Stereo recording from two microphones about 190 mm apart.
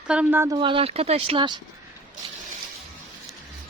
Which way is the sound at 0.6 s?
30° right (ahead or behind).